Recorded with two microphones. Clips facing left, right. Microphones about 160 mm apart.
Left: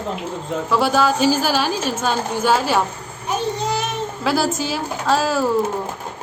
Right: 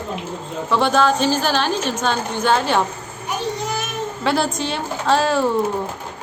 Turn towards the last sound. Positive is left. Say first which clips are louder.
# right 1 dB
turn(degrees=0)  # may be behind; listen again after turning